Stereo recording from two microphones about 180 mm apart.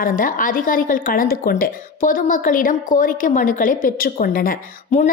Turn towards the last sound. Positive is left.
turn(degrees=50)  # may be behind; listen again after turning